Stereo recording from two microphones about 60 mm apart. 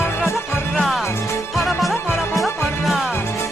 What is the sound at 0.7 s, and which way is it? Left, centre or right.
Music, centre.